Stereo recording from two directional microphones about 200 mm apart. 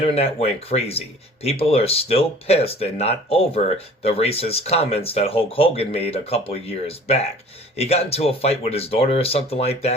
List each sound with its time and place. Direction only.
0.0 s speech: 30° left (ahead or behind)